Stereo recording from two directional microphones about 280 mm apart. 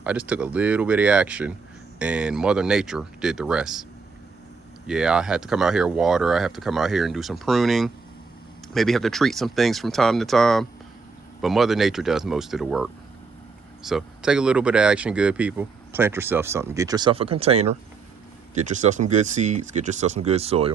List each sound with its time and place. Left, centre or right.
0.0 s speech: centre
4.9 s speech: centre; by 20.7 s right